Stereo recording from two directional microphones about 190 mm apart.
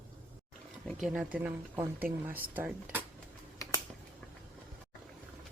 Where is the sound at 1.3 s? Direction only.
10° right (ahead or behind).